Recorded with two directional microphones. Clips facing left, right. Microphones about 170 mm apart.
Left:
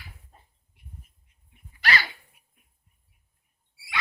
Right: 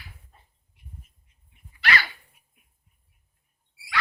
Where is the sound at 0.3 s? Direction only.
40° left (ahead or behind).